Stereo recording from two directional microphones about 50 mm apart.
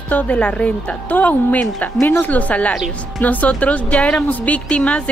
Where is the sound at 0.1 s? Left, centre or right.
Left.